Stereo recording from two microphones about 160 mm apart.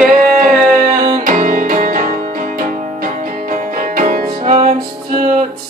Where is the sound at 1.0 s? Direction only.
60° right (ahead or behind).